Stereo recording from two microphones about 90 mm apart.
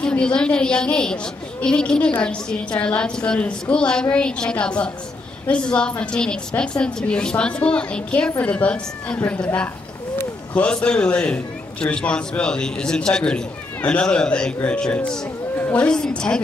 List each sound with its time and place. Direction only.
0.0 s a woman's voice: 10° left (ahead or behind)
15.5 s a sound: 25° left (ahead or behind)
15.8 s a woman's voice: 10° left (ahead or behind)